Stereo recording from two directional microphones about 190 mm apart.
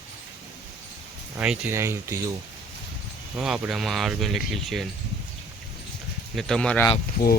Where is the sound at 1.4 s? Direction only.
10° right (ahead or behind).